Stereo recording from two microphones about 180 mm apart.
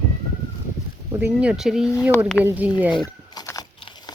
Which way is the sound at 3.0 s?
20° left (ahead or behind).